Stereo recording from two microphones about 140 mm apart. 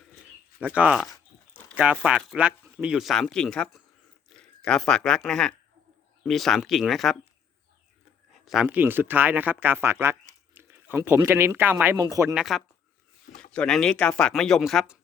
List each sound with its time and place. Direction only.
0.6 s speech: 10° right (ahead or behind)
8.3 s a sound: centre (ahead or behind)
8.6 s speech: 10° right (ahead or behind)
12.3 s speech: centre (ahead or behind)